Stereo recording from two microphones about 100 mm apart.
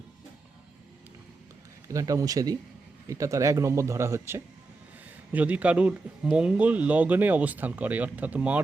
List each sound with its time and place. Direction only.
1.9 s speech: 35° right (ahead or behind)
5.3 s speech: 15° right (ahead or behind)